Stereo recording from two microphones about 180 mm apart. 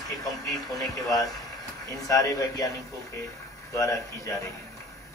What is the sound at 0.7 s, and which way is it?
Speech, 20° left (ahead or behind).